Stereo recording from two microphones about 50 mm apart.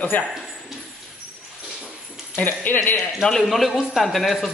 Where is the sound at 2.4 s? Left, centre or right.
Left.